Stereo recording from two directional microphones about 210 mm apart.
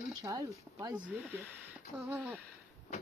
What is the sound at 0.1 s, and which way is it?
Speech, 15° right (ahead or behind).